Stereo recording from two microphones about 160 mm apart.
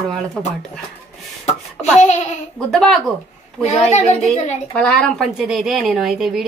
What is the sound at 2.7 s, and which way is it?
Speech, centre (ahead or behind).